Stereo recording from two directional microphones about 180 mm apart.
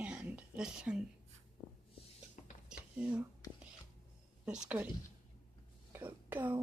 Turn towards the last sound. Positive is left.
turn(degrees=-10)  # may be behind; listen again after turning